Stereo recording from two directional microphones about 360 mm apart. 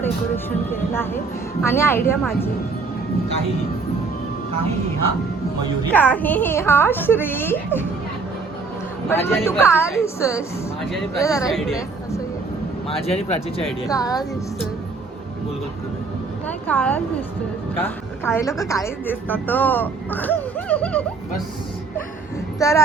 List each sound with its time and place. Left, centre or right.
0.7 s a woman's voice: centre
5.9 s a woman's voice: centre
9.0 s a woman's voice: centre
13.1 s a woman's voice: centre
16.5 s a woman's voice: centre
22.6 s a woman's voice: centre